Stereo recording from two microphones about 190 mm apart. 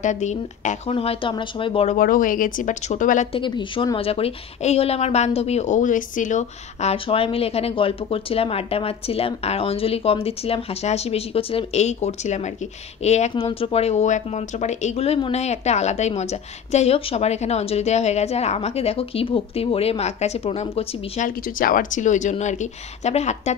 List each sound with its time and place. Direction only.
0.0 s a woman's voice: 40° left (ahead or behind)
2.0 s speech: 45° left (ahead or behind)
3.3 s a woman's voice: 25° left (ahead or behind)
21.5 s a woman's voice: 45° left (ahead or behind)